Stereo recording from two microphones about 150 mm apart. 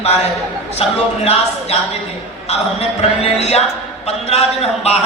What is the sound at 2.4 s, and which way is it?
A man's voice, 45° left (ahead or behind).